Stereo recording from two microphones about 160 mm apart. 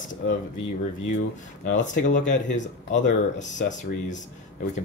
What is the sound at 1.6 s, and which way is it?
Speech, 50° left (ahead or behind).